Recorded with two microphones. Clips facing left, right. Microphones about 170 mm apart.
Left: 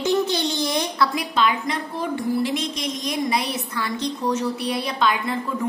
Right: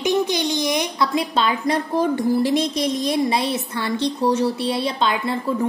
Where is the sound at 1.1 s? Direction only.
30° right (ahead or behind).